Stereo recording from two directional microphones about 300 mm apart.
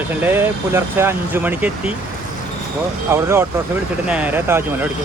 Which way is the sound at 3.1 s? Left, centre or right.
Centre.